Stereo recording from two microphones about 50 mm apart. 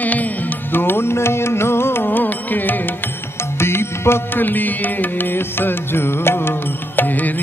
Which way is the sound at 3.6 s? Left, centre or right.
Left.